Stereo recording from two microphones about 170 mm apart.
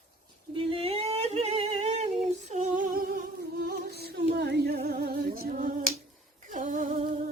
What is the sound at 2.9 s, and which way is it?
Music, 65° right (ahead or behind).